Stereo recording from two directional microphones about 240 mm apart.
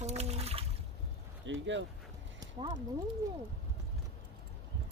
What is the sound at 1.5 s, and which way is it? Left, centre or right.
Speech, right.